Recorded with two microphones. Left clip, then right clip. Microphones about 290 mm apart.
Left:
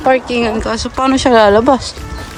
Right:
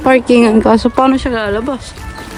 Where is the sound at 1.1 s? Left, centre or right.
Centre.